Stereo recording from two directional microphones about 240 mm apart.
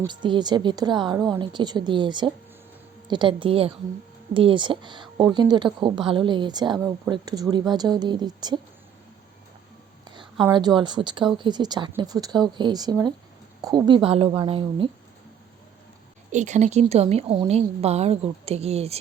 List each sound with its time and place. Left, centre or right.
0.0 s a woman's voice: centre
10.4 s a woman's voice: centre
16.3 s a woman's voice: right